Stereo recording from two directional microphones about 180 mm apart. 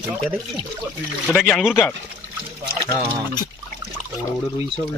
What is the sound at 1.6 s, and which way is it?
Speech, centre (ahead or behind).